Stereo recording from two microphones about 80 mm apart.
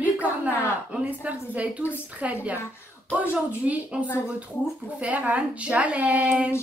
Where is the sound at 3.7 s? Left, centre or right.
Centre.